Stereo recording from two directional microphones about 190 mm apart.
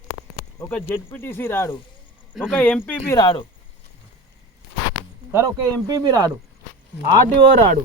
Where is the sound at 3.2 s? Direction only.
25° left (ahead or behind).